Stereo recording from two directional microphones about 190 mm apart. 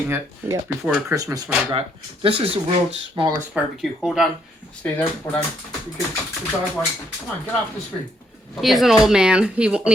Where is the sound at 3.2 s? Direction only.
25° right (ahead or behind).